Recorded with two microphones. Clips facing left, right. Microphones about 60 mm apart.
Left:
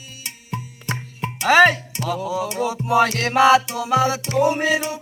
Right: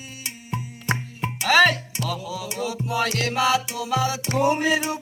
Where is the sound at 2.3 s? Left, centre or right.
Left.